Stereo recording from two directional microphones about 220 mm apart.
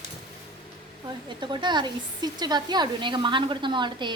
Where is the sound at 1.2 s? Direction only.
20° right (ahead or behind).